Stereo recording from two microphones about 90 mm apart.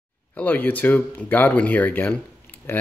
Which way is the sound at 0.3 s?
20° left (ahead or behind).